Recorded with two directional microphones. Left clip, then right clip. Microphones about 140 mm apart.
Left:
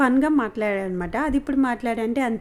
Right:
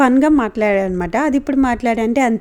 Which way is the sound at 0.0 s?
40° right (ahead or behind).